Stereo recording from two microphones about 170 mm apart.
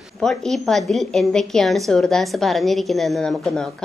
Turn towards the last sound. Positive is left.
turn(degrees=0)  # may be behind; listen again after turning